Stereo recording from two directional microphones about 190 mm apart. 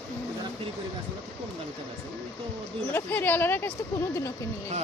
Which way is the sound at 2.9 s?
10° left (ahead or behind).